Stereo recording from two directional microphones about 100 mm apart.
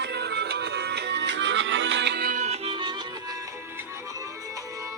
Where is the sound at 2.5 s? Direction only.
60° right (ahead or behind).